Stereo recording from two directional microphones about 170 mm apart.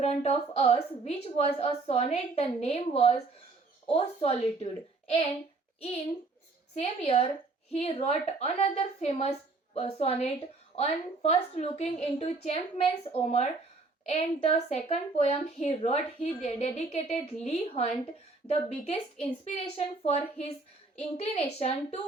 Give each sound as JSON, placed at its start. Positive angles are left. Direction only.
{"t": 0.0, "sound": "speech", "side_deg": 40}
{"t": 6.7, "sound": "speech", "side_deg": 35}